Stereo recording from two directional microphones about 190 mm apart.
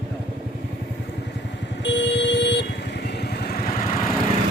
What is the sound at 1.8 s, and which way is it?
Vehicle, 65° left (ahead or behind).